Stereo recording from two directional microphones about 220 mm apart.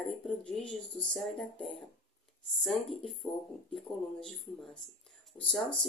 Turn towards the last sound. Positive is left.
turn(degrees=0)  # may be behind; listen again after turning